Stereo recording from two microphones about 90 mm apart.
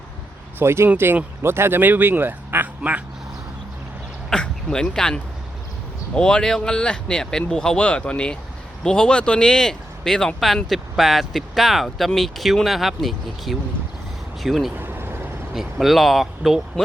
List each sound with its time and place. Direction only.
0.6 s speech: 30° right (ahead or behind)
4.3 s speech: 5° left (ahead or behind)
14.8 s vehicle: 25° right (ahead or behind)
15.5 s speech: 5° right (ahead or behind)